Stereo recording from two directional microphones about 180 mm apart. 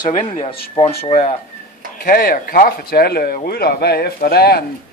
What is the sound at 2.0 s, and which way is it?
Speech, 55° left (ahead or behind).